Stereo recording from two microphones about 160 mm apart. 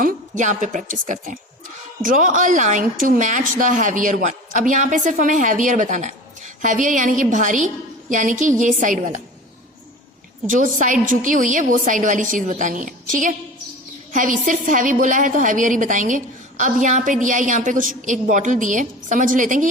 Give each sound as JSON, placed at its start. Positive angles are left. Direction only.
{"t": 0.0, "sound": "a woman's voice", "side_deg": -55}
{"t": 10.4, "sound": "a woman's voice", "side_deg": -55}
{"t": 14.1, "sound": "a woman's voice", "side_deg": -55}